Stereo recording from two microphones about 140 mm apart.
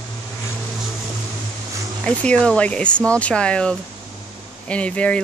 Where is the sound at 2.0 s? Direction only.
10° left (ahead or behind).